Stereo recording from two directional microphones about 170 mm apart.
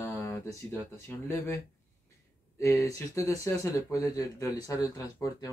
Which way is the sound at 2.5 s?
20° left (ahead or behind).